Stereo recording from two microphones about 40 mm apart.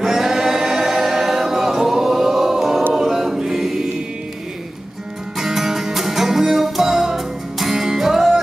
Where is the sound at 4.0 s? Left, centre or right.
Right.